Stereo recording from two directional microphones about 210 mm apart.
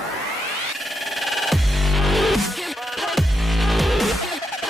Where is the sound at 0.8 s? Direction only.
Centre (ahead or behind).